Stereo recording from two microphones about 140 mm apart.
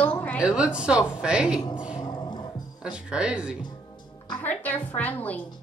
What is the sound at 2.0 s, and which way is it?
Music, 30° left (ahead or behind).